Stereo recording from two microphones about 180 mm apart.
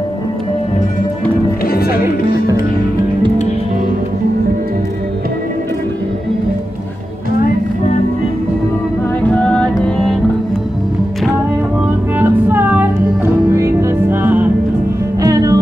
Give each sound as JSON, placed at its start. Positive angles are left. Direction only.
{"t": 1.7, "sound": "music", "side_deg": 55}
{"t": 9.3, "sound": "music", "side_deg": 5}
{"t": 12.2, "sound": "music", "side_deg": -10}